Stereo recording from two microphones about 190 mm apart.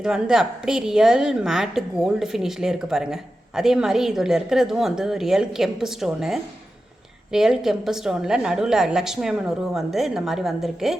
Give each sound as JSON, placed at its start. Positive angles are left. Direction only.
{"t": 0.0, "sound": "a woman's voice", "side_deg": -5}